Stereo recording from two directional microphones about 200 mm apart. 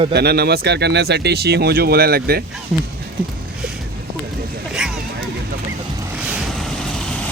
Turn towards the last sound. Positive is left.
turn(degrees=0)  # may be behind; listen again after turning